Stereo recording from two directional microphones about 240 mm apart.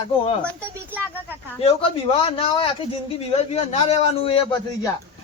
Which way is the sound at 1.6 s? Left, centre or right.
Left.